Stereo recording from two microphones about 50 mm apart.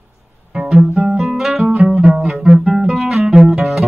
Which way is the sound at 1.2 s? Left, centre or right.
Centre.